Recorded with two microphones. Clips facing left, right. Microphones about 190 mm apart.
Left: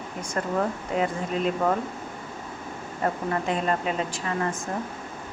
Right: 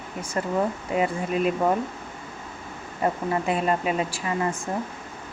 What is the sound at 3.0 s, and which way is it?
Speech, 10° right (ahead or behind).